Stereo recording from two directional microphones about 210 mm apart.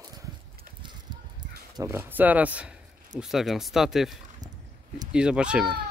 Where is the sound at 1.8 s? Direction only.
10° right (ahead or behind).